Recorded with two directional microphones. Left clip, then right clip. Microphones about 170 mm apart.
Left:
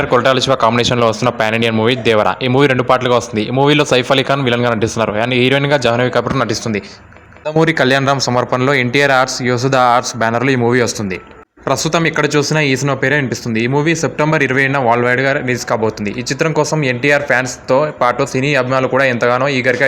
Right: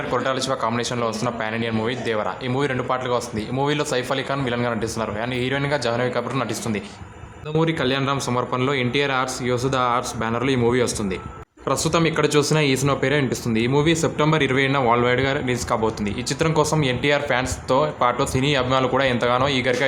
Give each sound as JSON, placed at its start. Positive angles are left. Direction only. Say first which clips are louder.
{"t": 0.1, "sound": "speech", "louder": "left 10 dB", "side_deg": 35}